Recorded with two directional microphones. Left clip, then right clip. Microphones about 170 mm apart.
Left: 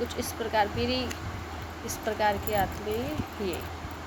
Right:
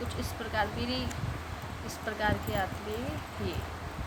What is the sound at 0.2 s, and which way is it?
Speech, 30° left (ahead or behind).